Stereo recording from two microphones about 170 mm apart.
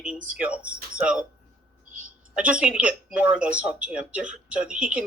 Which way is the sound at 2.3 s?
5° right (ahead or behind).